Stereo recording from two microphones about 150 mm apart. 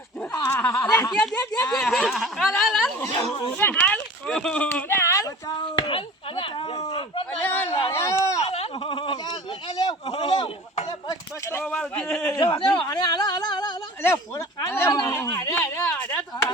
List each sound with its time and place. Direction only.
0.5 s snicker: 15° left (ahead or behind)
1.7 s speech: 5° left (ahead or behind)
3.6 s speech: 10° left (ahead or behind)
5.5 s speech: 35° left (ahead or behind)
7.4 s a sound: 15° left (ahead or behind)
8.4 s a sound: 45° left (ahead or behind); by 10.2 s 25° left (ahead or behind)
10.2 s speech: 30° left (ahead or behind)
11.6 s speech: 5° left (ahead or behind)
12.3 s speech: 35° left (ahead or behind)
14.0 s speech: 15° left (ahead or behind)